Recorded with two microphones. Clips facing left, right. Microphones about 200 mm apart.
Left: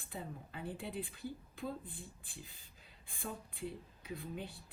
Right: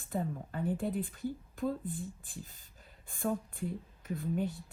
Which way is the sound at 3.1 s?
45° right (ahead or behind).